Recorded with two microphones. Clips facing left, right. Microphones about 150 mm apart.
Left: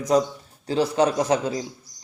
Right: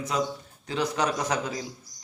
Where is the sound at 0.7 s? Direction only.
30° left (ahead or behind).